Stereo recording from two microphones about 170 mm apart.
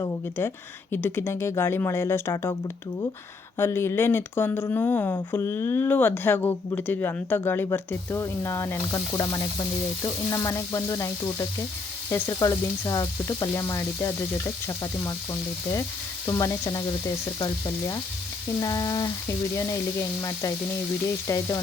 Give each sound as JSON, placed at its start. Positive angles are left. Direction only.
{"t": 0.0, "sound": "speech", "side_deg": 15}
{"t": 3.6, "sound": "speech", "side_deg": 15}
{"t": 10.0, "sound": "sizzle", "side_deg": 20}
{"t": 12.1, "sound": "speech", "side_deg": 15}
{"t": 16.2, "sound": "sizzle", "side_deg": 20}
{"t": 18.6, "sound": "sizzle", "side_deg": 20}
{"t": 21.2, "sound": "sizzle", "side_deg": 20}